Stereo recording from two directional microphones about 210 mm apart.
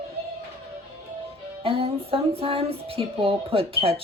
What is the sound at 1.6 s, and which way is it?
Music, 25° right (ahead or behind).